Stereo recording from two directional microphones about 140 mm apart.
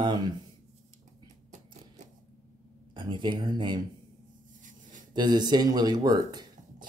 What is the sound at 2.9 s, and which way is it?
Speech, 35° right (ahead or behind).